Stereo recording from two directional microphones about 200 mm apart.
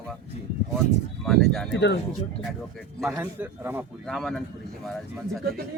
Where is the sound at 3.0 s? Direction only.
10° right (ahead or behind).